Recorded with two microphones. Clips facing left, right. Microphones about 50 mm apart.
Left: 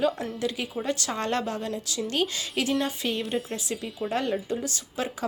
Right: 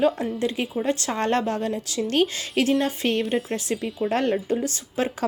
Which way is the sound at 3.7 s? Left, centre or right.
Right.